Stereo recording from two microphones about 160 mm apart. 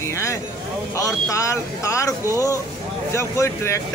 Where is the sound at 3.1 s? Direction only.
15° left (ahead or behind).